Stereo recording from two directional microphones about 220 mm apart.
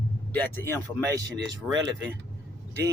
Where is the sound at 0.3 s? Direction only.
10° left (ahead or behind).